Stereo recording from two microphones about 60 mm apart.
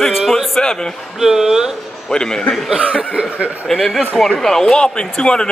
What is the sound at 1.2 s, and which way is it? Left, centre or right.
Speech, centre.